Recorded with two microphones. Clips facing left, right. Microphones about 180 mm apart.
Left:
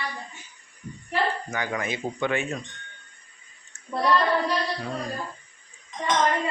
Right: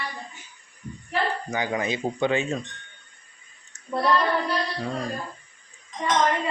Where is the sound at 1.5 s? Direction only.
20° right (ahead or behind).